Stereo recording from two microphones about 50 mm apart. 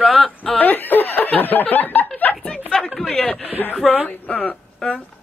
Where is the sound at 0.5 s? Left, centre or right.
Left.